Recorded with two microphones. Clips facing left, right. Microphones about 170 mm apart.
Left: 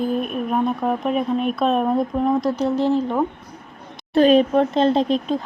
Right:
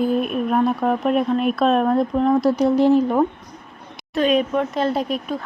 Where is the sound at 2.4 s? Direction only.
10° right (ahead or behind).